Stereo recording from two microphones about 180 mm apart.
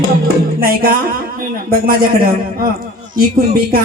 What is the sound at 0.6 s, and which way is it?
A man's voice, 55° right (ahead or behind).